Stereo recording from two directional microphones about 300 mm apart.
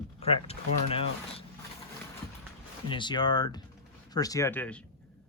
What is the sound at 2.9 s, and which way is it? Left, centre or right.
Speech, centre.